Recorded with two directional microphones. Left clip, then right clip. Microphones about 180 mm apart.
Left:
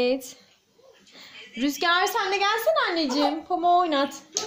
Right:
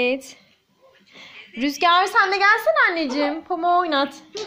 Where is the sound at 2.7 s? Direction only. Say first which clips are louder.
Right 5 dB; 20° right (ahead or behind).